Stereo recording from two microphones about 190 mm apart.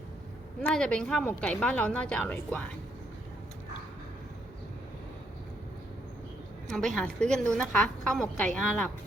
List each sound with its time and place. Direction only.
0.6 s speech: 5° left (ahead or behind)
6.7 s speech: 5° left (ahead or behind)